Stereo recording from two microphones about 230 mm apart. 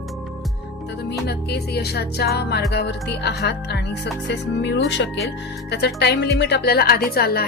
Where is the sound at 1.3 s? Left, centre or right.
Left.